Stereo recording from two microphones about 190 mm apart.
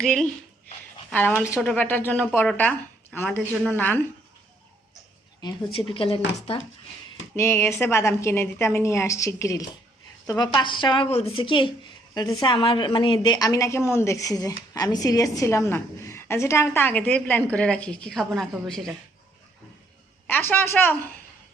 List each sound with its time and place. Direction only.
0.0 s a woman's voice: centre (ahead or behind)
1.5 s a woman's voice: 10° left (ahead or behind)
5.4 s a woman's voice: 25° left (ahead or behind)
7.3 s a woman's voice: 15° left (ahead or behind)
20.2 s a woman's voice: 10° left (ahead or behind)